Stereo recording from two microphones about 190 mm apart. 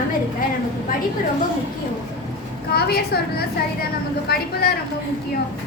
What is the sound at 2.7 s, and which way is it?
A woman's voice, 55° left (ahead or behind).